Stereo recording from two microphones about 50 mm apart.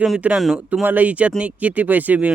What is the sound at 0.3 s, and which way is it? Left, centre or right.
Speech, centre.